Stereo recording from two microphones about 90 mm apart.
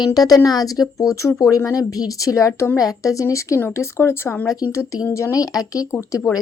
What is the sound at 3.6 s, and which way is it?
Speech, 25° left (ahead or behind).